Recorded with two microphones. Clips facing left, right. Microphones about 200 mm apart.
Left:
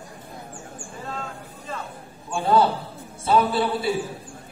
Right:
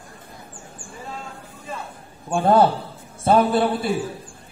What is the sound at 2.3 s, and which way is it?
A man's voice, 55° right (ahead or behind).